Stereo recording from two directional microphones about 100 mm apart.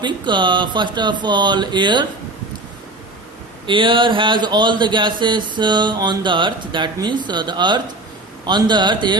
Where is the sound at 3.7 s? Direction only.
55° right (ahead or behind).